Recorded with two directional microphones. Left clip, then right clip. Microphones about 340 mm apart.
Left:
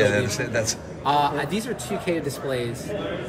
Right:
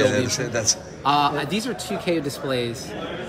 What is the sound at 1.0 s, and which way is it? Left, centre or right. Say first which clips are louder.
A man's voice: right 1 dB; right.